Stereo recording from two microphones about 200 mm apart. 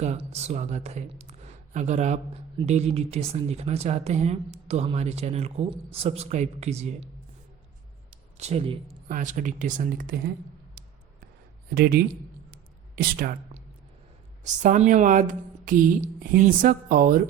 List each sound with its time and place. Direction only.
0.0 s speech: 35° right (ahead or behind)
8.4 s speech: 30° right (ahead or behind)
9.0 s speech: 40° right (ahead or behind)
11.7 s speech: 50° right (ahead or behind)